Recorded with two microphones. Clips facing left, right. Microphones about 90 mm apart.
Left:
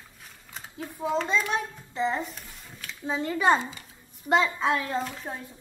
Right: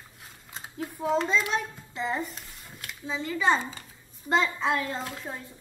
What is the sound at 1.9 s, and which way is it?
Speech, centre (ahead or behind).